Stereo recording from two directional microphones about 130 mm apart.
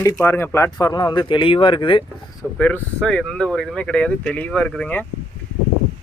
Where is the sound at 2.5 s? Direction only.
10° left (ahead or behind).